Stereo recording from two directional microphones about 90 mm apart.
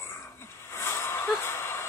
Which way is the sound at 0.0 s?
25° left (ahead or behind).